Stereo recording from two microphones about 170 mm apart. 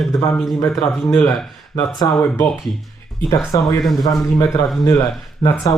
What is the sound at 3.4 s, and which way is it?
Speech, 20° left (ahead or behind).